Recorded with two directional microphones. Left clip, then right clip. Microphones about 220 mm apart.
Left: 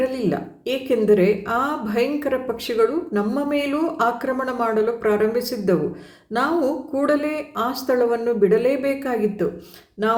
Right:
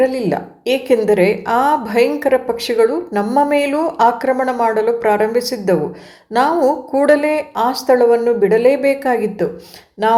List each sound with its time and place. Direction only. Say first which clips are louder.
0.0 s a woman's voice: right 7 dB; 5° left (ahead or behind)
6.9 s a woman's voice: right 8 dB; 10° left (ahead or behind)